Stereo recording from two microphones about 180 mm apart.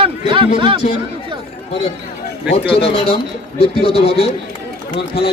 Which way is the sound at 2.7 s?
30° left (ahead or behind).